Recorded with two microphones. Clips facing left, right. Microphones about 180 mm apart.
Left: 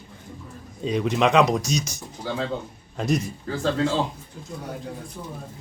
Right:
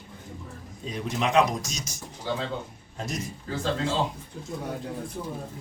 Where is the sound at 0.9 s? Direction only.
70° left (ahead or behind).